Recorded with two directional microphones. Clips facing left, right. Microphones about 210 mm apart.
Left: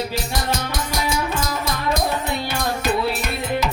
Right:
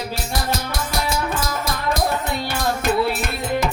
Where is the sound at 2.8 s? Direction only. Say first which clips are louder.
Right 2 dB; 50° right (ahead or behind).